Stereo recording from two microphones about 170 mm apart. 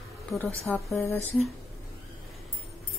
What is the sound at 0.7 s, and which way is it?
Speech, 5° left (ahead or behind).